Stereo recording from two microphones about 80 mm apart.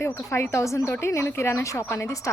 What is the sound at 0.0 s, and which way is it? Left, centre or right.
Speech, left.